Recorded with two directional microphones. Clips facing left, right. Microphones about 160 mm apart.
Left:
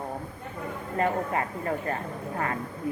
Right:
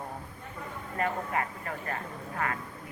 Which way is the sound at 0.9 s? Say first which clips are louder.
Left 4 dB; 30° left (ahead or behind).